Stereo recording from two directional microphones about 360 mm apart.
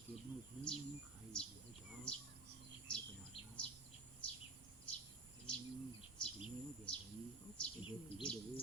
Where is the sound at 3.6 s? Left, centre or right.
Centre.